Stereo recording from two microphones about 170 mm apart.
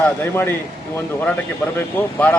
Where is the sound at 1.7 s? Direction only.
10° left (ahead or behind).